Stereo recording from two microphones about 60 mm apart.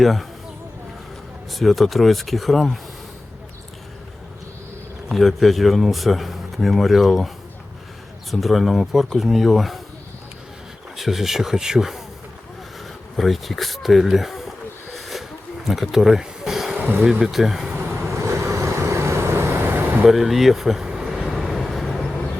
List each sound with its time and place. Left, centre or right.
0.0 s speech: centre
1.5 s speech: centre
5.1 s speech: centre
8.3 s speech: centre
10.9 s speech: centre
13.1 s speech: centre
14.9 s a sound: centre
17.0 s speech: centre
18.1 s vehicle: right
20.1 s vehicle: centre